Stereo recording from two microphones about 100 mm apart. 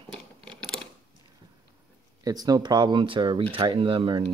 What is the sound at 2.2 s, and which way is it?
Speech, 40° right (ahead or behind).